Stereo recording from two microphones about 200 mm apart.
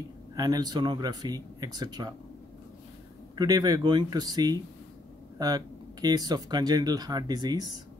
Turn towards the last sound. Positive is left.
turn(degrees=-20)  # may be behind; listen again after turning